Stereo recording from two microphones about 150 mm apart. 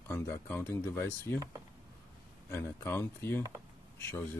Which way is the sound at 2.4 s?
15° left (ahead or behind).